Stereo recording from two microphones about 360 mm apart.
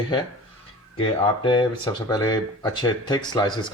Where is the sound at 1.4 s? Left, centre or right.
Centre.